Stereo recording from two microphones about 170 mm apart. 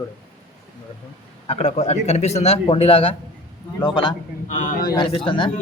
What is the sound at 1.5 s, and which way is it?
A man's voice, 40° left (ahead or behind).